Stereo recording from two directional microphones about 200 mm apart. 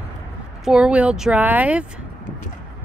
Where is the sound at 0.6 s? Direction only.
5° right (ahead or behind).